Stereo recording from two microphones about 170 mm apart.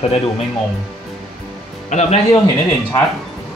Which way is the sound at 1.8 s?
45° left (ahead or behind).